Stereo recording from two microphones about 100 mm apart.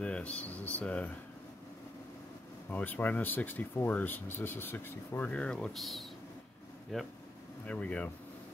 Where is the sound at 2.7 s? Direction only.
20° left (ahead or behind).